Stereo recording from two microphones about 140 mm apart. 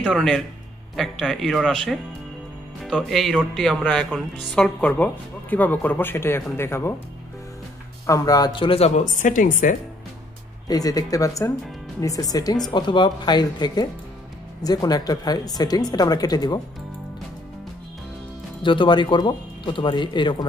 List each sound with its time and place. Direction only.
0.0 s speech: 5° left (ahead or behind)
8.1 s speech: 25° left (ahead or behind); by 9.8 s 70° left (ahead or behind)
10.7 s speech: 25° left (ahead or behind)
18.6 s speech: 35° left (ahead or behind)